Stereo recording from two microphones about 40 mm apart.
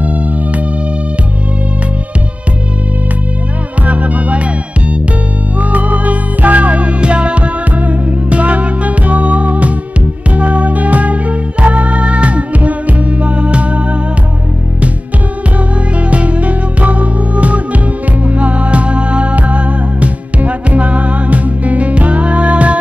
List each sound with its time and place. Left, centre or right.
3.8 s music: right
5.6 s music: right
16.1 s music: right